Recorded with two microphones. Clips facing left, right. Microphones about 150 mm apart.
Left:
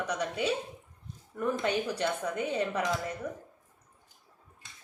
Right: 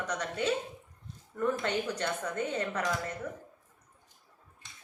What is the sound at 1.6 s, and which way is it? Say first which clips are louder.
A woman's voice: left 2 dB; 10° left (ahead or behind).